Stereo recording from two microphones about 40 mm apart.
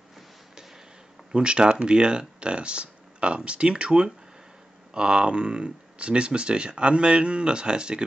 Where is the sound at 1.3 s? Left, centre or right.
Right.